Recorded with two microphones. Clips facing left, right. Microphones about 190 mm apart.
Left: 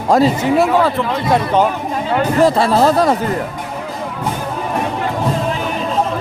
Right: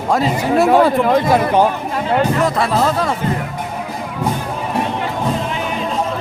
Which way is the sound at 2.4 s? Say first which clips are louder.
Left 4 dB; 35° left (ahead or behind).